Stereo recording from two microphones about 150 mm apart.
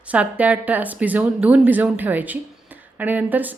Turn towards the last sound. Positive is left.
turn(degrees=-10)  # may be behind; listen again after turning